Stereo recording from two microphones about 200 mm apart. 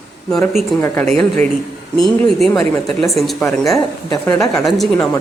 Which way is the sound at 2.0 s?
Centre (ahead or behind).